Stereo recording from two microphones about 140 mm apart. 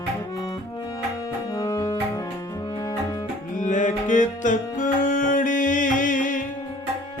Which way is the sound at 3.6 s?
60° left (ahead or behind).